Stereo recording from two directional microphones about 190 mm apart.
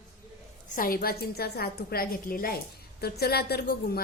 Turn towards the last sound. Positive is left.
turn(degrees=55)  # may be behind; listen again after turning